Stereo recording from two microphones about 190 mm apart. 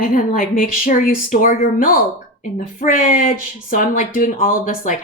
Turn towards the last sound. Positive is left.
turn(degrees=45)  # may be behind; listen again after turning